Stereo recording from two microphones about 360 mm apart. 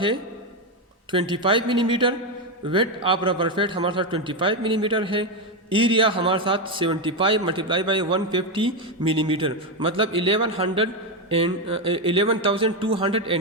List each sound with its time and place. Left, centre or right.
1.1 s a man's voice: centre